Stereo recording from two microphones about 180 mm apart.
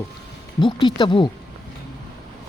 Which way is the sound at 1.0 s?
25° left (ahead or behind).